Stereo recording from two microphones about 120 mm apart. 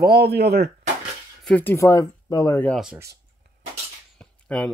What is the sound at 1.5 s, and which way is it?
Speech, 15° left (ahead or behind).